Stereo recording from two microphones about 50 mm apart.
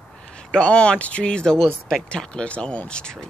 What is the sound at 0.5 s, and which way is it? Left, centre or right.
Speech, left.